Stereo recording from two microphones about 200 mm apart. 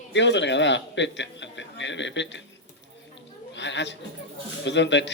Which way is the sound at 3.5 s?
65° left (ahead or behind).